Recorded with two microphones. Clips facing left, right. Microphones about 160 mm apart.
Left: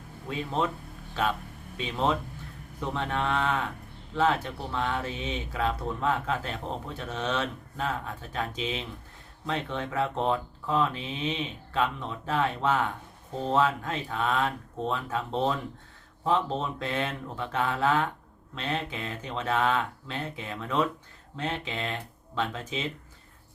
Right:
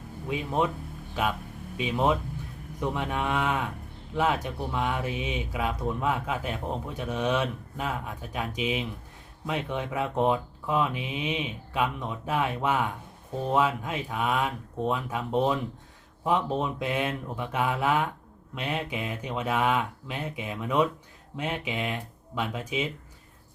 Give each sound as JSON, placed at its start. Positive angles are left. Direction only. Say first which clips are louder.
{"t": 0.3, "sound": "speech", "louder": "right 2 dB", "side_deg": -15}